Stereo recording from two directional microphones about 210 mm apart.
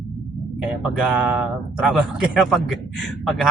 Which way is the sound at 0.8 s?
Centre (ahead or behind).